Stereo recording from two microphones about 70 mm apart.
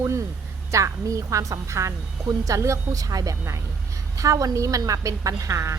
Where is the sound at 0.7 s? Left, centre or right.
Right.